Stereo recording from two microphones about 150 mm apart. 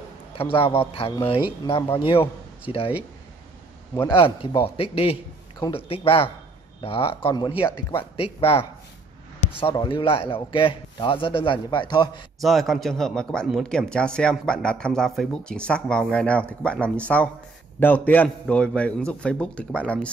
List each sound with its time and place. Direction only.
0.3 s a man's voice: 40° left (ahead or behind)
3.9 s a man's voice: 15° left (ahead or behind)
4.2 s a man's voice: 35° left (ahead or behind)
12.4 s a man's voice: centre (ahead or behind)